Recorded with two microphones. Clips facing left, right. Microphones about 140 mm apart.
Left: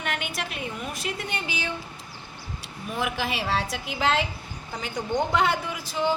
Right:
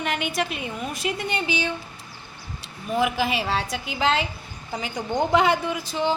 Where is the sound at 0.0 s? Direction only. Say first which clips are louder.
Right 5 dB; centre (ahead or behind).